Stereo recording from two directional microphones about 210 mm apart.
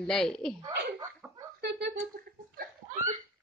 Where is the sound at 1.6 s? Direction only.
50° right (ahead or behind).